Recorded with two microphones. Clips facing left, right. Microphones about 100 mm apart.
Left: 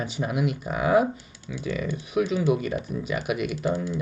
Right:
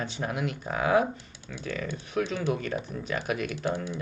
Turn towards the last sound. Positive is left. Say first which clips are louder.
# left 4 dB
turn(degrees=10)  # may be behind; listen again after turning